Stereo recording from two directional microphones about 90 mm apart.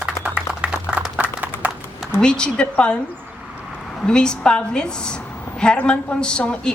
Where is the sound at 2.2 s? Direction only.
10° left (ahead or behind).